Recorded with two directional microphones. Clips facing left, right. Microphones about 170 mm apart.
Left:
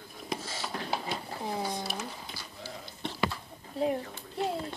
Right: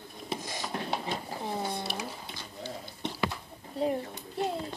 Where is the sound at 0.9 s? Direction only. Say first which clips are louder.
Right 1 dB; 5° left (ahead or behind).